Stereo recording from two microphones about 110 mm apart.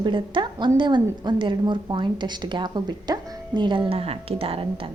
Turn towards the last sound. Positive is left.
turn(degrees=-60)  # may be behind; listen again after turning